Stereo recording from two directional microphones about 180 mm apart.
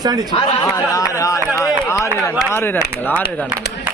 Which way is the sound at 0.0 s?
20° right (ahead or behind).